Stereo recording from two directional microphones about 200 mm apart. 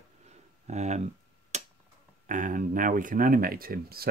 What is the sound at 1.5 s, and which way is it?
Tick-tock, 35° right (ahead or behind).